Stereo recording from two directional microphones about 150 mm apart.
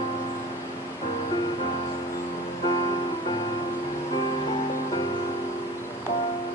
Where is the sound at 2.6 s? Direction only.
35° left (ahead or behind).